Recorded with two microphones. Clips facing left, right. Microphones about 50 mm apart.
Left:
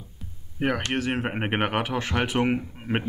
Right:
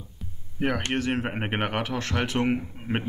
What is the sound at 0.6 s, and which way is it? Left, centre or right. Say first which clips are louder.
Speech: left 1 dB; centre.